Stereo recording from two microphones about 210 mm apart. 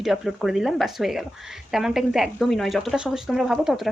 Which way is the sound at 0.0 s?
Centre (ahead or behind).